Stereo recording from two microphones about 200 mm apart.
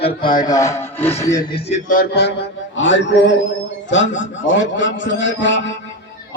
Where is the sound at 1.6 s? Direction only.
40° left (ahead or behind).